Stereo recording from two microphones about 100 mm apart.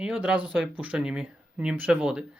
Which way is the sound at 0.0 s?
10° right (ahead or behind).